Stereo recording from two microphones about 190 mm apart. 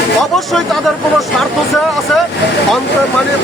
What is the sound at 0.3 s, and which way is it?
Speech, centre (ahead or behind).